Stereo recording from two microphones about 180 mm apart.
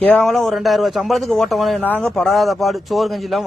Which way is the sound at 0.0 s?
5° left (ahead or behind).